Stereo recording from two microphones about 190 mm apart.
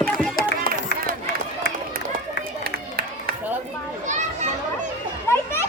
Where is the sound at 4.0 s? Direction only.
40° right (ahead or behind).